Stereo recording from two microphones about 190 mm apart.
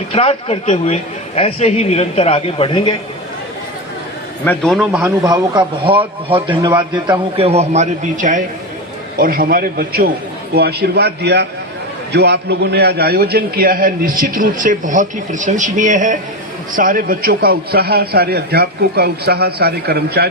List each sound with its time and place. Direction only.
0.1 s speech: 30° left (ahead or behind)
4.4 s a man's voice: 5° left (ahead or behind)
4.9 s speech: 10° right (ahead or behind)
5.2 s a man's voice: 20° right (ahead or behind); by 20.2 s 60° right (ahead or behind)